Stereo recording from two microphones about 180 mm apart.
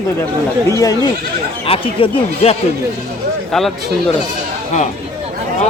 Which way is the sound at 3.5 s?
Centre (ahead or behind).